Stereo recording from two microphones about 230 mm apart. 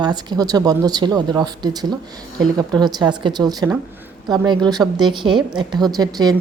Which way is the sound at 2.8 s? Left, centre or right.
Centre.